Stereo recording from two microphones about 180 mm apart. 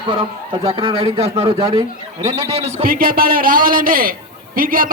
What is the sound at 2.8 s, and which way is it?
A man's voice, 55° right (ahead or behind).